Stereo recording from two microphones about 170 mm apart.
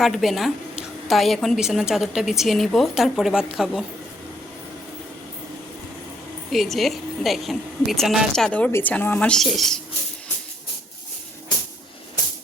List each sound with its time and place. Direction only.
0.0 s a woman's voice: centre (ahead or behind)
6.5 s a woman's voice: centre (ahead or behind)